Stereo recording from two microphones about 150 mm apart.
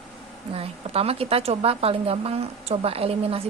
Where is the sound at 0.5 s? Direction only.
40° right (ahead or behind).